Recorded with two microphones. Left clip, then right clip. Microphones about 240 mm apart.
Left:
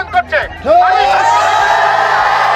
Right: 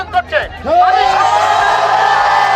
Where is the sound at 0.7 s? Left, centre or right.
Left.